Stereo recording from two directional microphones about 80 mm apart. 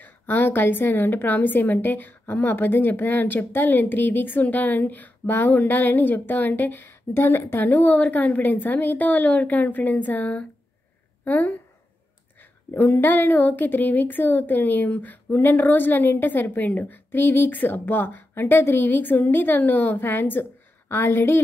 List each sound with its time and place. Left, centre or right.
0.0 s a woman's voice: left
12.7 s a woman's voice: left